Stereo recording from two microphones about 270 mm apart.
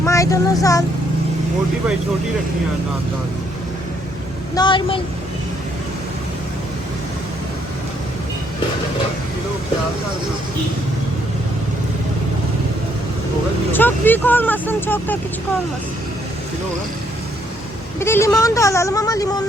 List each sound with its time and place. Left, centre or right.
0.0 s child singing: centre
4.5 s speech: centre
13.7 s speech: centre
18.0 s speech: centre